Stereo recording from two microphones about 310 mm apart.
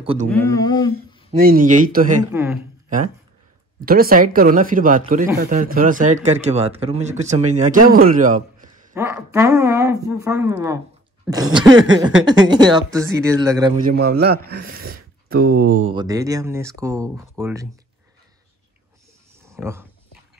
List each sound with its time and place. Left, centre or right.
0.0 s speech: centre
0.3 s speech: centre
1.4 s a man's voice: right
2.3 s a woman's voice: centre
3.8 s a man's voice: right
8.9 s a woman's voice: centre
13.7 s a man's voice: right
15.9 s a woman's voice: centre
19.5 s speech: centre